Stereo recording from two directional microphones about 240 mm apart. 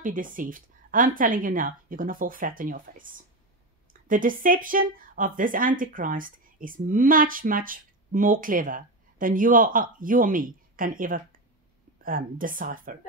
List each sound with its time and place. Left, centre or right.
0.0 s a woman's voice: right